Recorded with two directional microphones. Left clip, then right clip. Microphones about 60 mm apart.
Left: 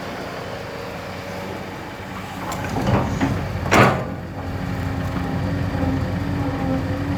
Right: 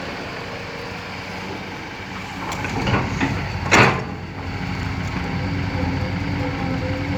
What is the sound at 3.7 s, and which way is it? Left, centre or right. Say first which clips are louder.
Sliding door: right 1 dB; centre.